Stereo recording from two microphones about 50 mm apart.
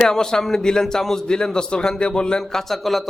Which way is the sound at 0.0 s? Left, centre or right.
Centre.